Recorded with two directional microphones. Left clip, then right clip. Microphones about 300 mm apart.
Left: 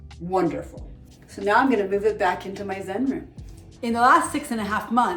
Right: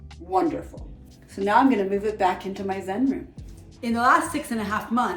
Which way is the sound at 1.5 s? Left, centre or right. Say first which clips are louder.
Even; centre.